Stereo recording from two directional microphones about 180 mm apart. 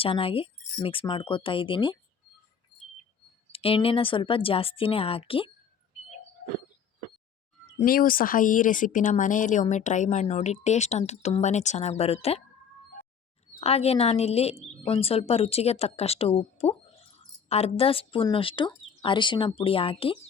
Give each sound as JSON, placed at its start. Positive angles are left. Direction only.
{"t": 0.0, "sound": "speech", "side_deg": 30}
{"t": 3.5, "sound": "a woman's voice", "side_deg": 30}
{"t": 7.9, "sound": "a woman's voice", "side_deg": 50}
{"t": 13.6, "sound": "a woman's voice", "side_deg": 35}